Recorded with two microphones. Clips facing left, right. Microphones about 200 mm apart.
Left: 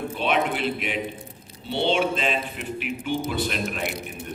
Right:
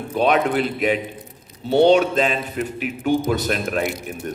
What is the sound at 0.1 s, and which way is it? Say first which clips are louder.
A man's voice: right 8 dB; 45° right (ahead or behind).